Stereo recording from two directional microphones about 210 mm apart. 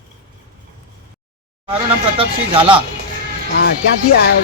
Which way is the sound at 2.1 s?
25° right (ahead or behind).